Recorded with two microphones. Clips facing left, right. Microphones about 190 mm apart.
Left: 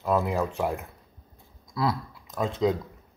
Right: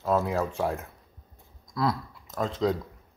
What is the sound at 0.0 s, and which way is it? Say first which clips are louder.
Speech: even; 15° left (ahead or behind).